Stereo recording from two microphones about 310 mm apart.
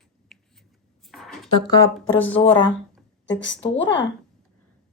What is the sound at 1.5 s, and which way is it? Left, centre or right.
Speech, centre.